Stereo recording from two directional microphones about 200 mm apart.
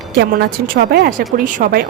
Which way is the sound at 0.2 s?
50° right (ahead or behind).